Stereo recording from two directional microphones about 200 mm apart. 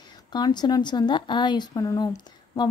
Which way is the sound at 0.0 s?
20° left (ahead or behind).